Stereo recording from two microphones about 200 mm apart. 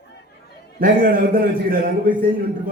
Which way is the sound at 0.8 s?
45° right (ahead or behind).